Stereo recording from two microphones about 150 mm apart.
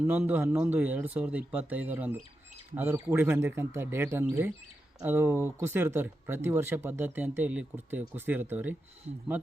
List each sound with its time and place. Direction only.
0.0 s speech: 10° right (ahead or behind)